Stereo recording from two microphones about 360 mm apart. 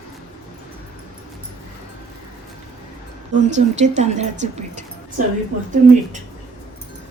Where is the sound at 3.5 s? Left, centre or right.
Centre.